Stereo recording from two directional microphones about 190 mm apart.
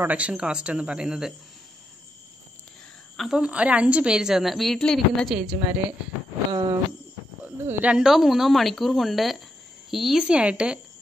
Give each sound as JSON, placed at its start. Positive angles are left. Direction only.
{"t": 0.0, "sound": "a woman's voice", "side_deg": -5}
{"t": 3.2, "sound": "a woman's voice", "side_deg": -5}
{"t": 6.5, "sound": "a sound", "side_deg": -25}
{"t": 7.4, "sound": "a woman's voice", "side_deg": -10}